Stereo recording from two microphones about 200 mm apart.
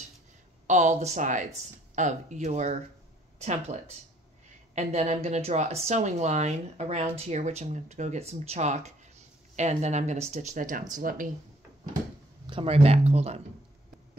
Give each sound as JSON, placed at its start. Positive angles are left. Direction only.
{"t": 0.7, "sound": "speech", "side_deg": -35}
{"t": 12.4, "sound": "speech", "side_deg": -25}